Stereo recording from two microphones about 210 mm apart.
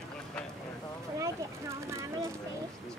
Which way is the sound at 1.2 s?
15° right (ahead or behind).